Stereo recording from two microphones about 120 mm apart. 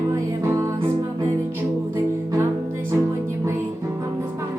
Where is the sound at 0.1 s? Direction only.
25° right (ahead or behind).